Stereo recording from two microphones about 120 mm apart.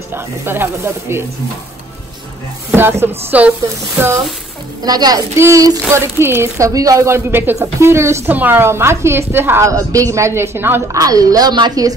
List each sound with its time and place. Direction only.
0.1 s speech: 20° right (ahead or behind)
2.7 s speech: 20° right (ahead or behind)
4.8 s a woman's voice: 35° right (ahead or behind)
11.0 s a woman's voice: 30° right (ahead or behind)